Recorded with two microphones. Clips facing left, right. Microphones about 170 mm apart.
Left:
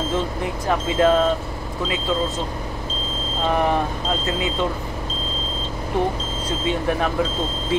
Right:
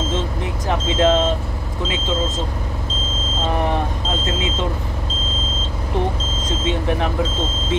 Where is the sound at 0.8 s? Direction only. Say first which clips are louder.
Even; 25° right (ahead or behind).